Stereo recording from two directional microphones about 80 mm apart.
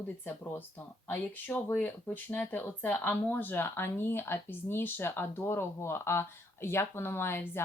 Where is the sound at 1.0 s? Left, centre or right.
Left.